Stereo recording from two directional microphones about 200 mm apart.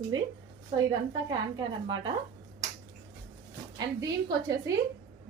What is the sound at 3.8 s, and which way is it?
Speech, 20° right (ahead or behind).